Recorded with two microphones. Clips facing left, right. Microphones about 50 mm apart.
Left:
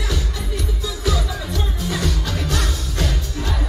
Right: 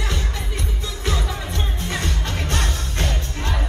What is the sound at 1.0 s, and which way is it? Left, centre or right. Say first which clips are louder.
Music: left 2 dB; right.